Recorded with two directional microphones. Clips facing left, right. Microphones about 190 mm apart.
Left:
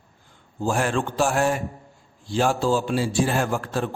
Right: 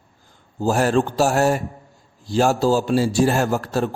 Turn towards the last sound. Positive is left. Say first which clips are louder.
# right 4 dB
turn(degrees=-40)  # may be behind; listen again after turning